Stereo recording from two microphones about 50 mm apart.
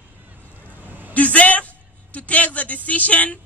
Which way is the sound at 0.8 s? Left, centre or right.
Right.